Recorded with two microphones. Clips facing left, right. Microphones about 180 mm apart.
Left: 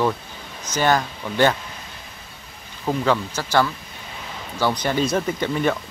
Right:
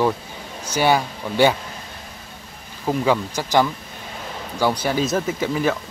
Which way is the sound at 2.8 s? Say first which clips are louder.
Right 1 dB; 10° right (ahead or behind).